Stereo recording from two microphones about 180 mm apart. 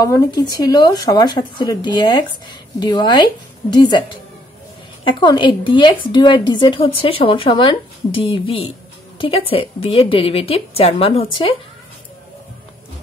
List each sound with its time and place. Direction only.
0.0 s a woman's voice: 15° left (ahead or behind)